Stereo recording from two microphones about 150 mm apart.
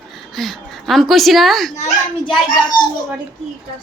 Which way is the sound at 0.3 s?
Centre (ahead or behind).